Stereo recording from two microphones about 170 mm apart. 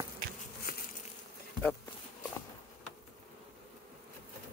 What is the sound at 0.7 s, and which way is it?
Bee, 60° left (ahead or behind).